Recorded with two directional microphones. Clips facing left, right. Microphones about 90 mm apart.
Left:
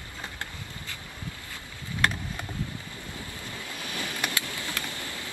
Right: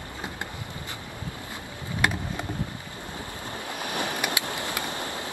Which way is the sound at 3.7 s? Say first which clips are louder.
Right 7 dB; 65° right (ahead or behind).